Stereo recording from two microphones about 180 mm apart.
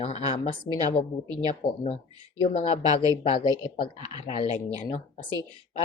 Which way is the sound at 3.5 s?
55° left (ahead or behind).